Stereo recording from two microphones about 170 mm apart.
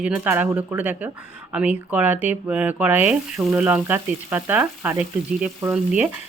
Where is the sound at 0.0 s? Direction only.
10° right (ahead or behind).